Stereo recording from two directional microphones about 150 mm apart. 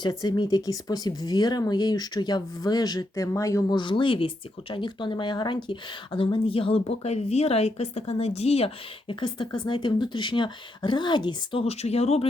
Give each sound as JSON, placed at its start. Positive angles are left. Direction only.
{"t": 0.0, "sound": "speech", "side_deg": 30}
{"t": 11.6, "sound": "speech", "side_deg": 45}